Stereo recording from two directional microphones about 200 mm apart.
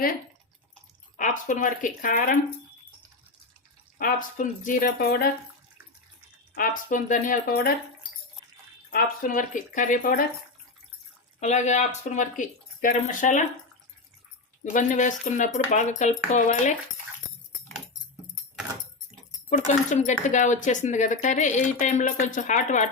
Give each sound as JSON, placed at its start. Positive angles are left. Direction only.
{"t": 1.1, "sound": "speech", "side_deg": 40}
{"t": 3.9, "sound": "speech", "side_deg": 45}
{"t": 6.5, "sound": "speech", "side_deg": 45}
{"t": 8.9, "sound": "speech", "side_deg": 45}
{"t": 11.3, "sound": "speech", "side_deg": 35}
{"t": 14.6, "sound": "speech", "side_deg": 40}
{"t": 19.5, "sound": "speech", "side_deg": 35}